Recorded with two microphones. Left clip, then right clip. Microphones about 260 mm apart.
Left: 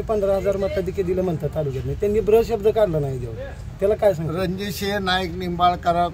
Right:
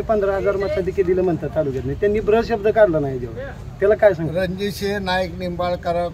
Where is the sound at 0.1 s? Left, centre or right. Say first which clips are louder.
Right 2 dB; left.